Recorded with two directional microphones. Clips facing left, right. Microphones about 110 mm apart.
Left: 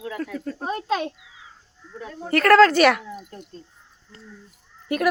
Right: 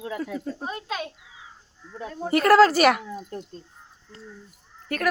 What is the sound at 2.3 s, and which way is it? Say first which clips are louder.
Speech: left 2 dB; 10° right (ahead or behind).